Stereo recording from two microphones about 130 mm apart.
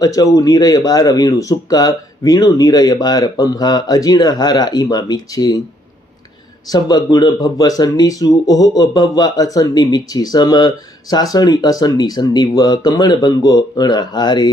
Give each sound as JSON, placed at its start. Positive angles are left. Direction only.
{"t": 0.0, "sound": "speech", "side_deg": 25}
{"t": 6.7, "sound": "speech", "side_deg": 30}